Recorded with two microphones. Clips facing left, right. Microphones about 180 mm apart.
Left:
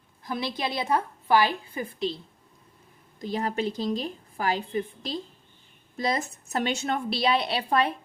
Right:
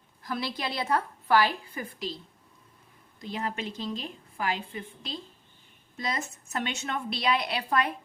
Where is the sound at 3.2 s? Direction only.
40° left (ahead or behind).